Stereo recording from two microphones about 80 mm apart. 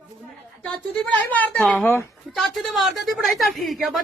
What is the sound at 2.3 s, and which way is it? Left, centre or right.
A woman's voice, centre.